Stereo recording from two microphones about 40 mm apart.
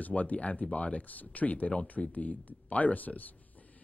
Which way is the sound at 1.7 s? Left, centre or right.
Left.